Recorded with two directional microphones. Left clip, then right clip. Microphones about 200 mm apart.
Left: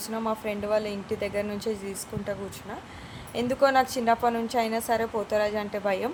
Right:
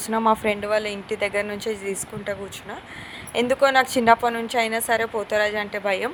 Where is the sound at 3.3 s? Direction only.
20° right (ahead or behind).